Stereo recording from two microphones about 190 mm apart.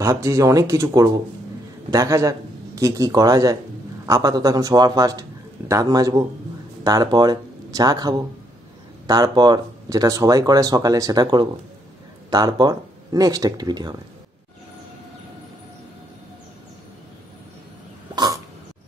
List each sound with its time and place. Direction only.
0.0 s speech: 15° right (ahead or behind)
18.1 s cough: 20° right (ahead or behind)